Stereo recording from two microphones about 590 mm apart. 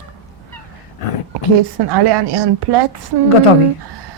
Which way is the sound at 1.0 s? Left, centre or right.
Left.